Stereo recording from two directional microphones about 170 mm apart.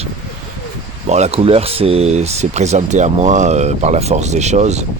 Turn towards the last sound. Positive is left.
turn(degrees=-40)  # may be behind; listen again after turning